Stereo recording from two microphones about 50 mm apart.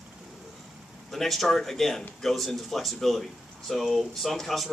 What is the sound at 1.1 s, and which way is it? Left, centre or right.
Speech, centre.